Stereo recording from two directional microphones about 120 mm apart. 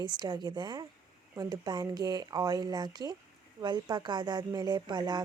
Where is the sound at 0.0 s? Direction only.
35° right (ahead or behind).